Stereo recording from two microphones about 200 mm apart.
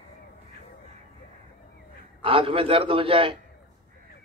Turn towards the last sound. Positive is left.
turn(degrees=-25)  # may be behind; listen again after turning